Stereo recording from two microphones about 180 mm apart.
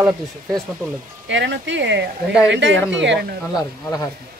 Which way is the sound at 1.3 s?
80° right.